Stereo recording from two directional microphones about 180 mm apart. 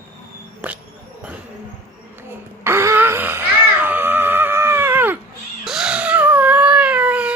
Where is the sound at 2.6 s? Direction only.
15° right (ahead or behind).